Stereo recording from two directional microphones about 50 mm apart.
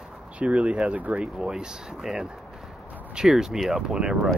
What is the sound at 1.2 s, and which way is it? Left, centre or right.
Speech, centre.